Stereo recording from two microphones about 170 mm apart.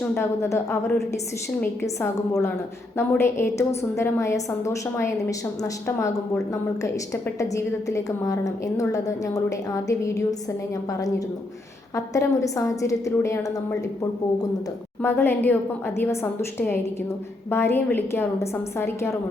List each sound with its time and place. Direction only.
0.1 s a woman's voice: 15° left (ahead or behind)
11.9 s a woman's voice: 20° left (ahead or behind)